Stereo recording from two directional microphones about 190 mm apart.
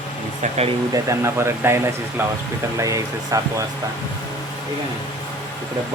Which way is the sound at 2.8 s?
15° right (ahead or behind).